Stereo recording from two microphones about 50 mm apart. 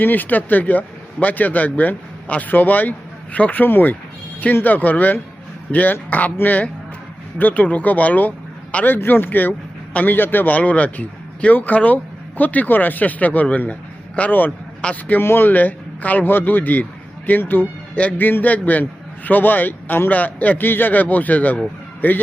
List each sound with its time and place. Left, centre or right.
0.0 s a man's voice: left
14.8 s a man's voice: left
15.2 s speech: left